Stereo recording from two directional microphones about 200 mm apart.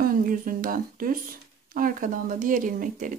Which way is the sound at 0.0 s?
45° right (ahead or behind).